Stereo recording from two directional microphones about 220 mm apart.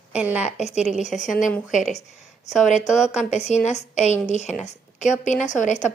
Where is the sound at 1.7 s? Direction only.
35° left (ahead or behind).